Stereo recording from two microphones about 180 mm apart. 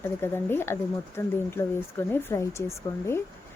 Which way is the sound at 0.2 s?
10° left (ahead or behind).